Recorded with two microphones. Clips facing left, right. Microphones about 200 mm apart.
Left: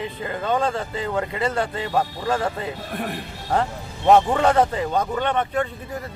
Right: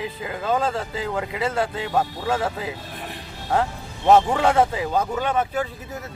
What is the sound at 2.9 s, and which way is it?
Speech, 55° left (ahead or behind).